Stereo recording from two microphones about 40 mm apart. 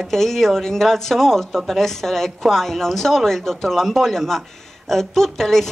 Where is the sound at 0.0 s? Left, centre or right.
Centre.